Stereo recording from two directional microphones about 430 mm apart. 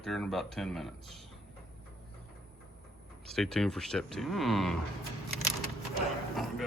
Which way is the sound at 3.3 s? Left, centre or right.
Centre.